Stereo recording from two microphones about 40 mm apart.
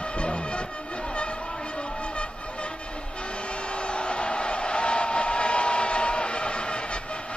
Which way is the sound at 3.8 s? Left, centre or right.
Left.